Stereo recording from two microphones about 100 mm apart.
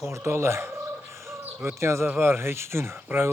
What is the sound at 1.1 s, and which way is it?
Bird, 25° right (ahead or behind).